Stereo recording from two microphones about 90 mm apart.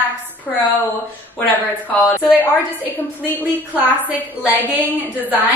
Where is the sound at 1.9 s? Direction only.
20° left (ahead or behind).